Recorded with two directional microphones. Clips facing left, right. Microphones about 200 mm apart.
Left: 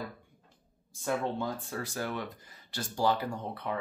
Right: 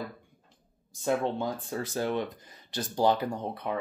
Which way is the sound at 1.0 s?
20° right (ahead or behind).